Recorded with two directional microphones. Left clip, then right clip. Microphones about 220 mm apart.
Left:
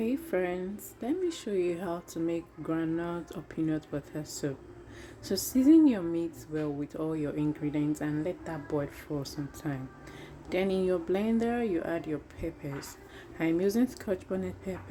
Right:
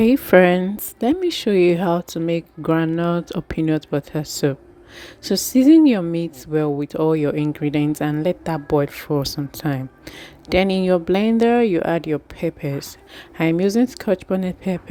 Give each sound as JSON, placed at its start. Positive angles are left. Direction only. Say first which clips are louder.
{"t": 0.0, "sound": "a woman's voice", "louder": "right 18 dB", "side_deg": -45}